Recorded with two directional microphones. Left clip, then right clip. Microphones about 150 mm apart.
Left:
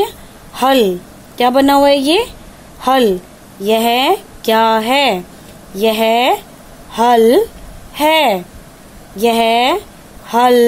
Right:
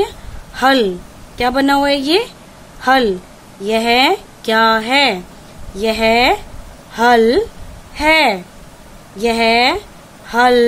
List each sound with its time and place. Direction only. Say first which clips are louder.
0.6 s speech: left 1 dB; 20° left (ahead or behind)